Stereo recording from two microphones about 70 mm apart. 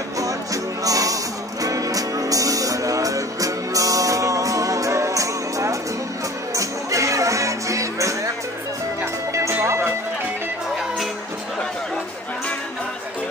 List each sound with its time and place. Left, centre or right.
0.2 s music: right
9.5 s music: right